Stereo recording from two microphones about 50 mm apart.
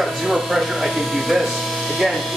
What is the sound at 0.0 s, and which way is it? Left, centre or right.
Speech, centre.